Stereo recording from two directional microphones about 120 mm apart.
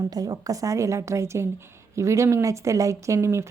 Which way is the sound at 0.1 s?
30° right (ahead or behind).